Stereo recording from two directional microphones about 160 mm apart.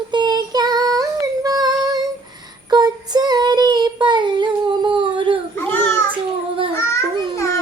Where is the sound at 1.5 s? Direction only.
25° right (ahead or behind).